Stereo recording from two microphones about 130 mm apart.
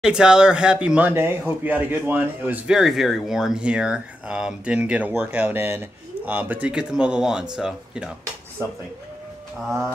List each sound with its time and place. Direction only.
0.0 s speech: 5° right (ahead or behind)
8.6 s speech: 20° right (ahead or behind)
9.7 s speech: centre (ahead or behind)